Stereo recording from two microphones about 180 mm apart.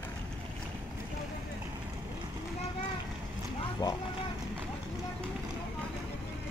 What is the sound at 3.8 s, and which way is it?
Vehicle, 25° left (ahead or behind).